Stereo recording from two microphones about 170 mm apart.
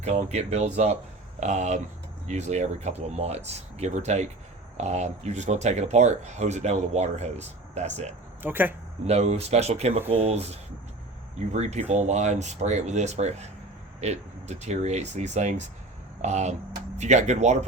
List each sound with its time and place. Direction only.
0.0 s speech: 40° right (ahead or behind)
8.4 s speech: 10° right (ahead or behind)
9.0 s speech: 40° right (ahead or behind)